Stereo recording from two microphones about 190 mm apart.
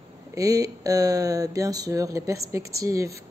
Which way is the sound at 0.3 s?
20° right (ahead or behind).